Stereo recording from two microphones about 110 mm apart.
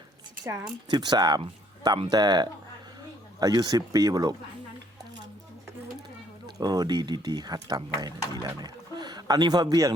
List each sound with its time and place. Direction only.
0.4 s speech: 40° right (ahead or behind)
6.6 s speech: 35° right (ahead or behind)